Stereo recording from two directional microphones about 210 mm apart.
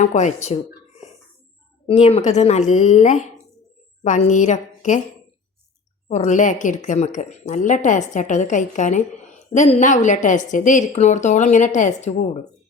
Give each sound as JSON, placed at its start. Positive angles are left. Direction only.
{"t": 0.0, "sound": "a woman's voice", "side_deg": 35}
{"t": 1.9, "sound": "a woman's voice", "side_deg": 30}
{"t": 6.1, "sound": "a woman's voice", "side_deg": 35}